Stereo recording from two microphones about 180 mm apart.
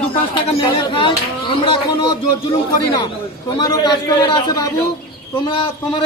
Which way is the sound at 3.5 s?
20° left (ahead or behind).